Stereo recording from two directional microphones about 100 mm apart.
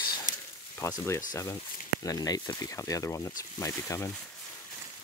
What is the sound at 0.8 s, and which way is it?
Speech, 30° left (ahead or behind).